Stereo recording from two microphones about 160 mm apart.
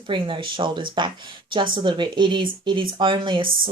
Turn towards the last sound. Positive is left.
turn(degrees=-30)  # may be behind; listen again after turning